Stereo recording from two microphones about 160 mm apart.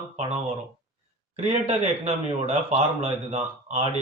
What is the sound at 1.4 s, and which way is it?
Speech, 45° right (ahead or behind).